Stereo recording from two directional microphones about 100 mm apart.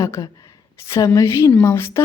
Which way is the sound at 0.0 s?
35° left (ahead or behind).